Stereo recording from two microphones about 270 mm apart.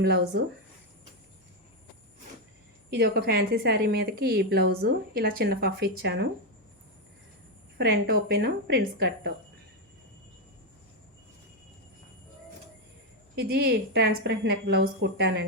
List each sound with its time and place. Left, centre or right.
0.0 s a woman's voice: right
3.0 s a woman's voice: right
7.8 s a woman's voice: right
13.3 s a woman's voice: right